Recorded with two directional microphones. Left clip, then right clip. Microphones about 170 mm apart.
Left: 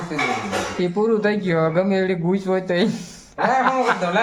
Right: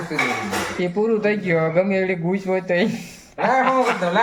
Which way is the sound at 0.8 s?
20° left (ahead or behind).